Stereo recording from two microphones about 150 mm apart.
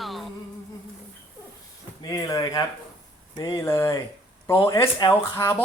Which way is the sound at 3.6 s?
20° left (ahead or behind).